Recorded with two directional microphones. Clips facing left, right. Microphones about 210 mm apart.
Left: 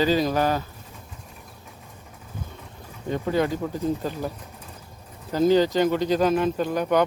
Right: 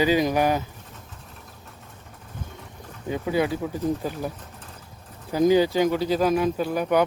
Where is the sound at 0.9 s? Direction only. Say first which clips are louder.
Left 1 dB; 10° left (ahead or behind).